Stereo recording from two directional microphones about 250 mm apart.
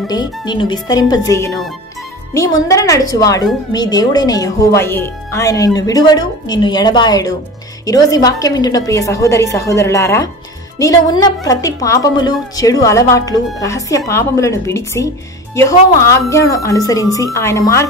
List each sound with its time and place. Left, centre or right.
0.1 s speech: centre